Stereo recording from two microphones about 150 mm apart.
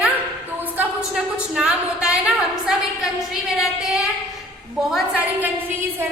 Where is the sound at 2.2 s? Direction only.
5° right (ahead or behind).